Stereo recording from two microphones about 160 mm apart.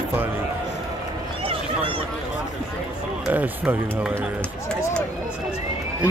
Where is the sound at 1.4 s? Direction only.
35° right (ahead or behind).